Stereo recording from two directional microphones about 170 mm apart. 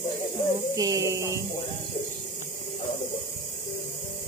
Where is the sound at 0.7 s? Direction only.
20° right (ahead or behind).